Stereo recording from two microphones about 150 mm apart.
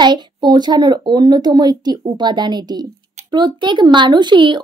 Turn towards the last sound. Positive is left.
turn(degrees=-30)  # may be behind; listen again after turning